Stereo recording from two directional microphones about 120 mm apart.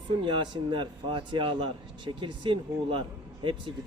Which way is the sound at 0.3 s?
40° right (ahead or behind).